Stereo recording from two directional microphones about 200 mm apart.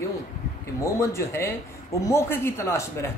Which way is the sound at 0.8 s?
15° left (ahead or behind).